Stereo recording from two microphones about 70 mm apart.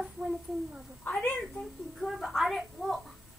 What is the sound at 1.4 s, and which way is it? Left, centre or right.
A child's voice, centre.